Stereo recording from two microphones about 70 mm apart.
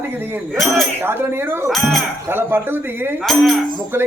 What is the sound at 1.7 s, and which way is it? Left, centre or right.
Speech, centre.